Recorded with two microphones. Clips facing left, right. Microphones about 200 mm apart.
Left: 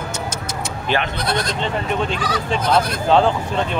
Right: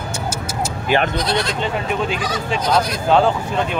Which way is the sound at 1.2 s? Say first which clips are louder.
Right 1 dB; 50° left (ahead or behind).